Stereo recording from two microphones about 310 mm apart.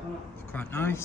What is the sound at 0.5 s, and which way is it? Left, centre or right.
Speech, centre.